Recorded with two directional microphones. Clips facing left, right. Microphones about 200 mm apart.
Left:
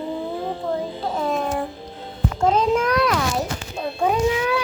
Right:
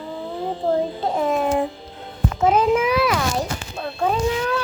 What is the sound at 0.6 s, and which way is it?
Babbling, 40° right (ahead or behind).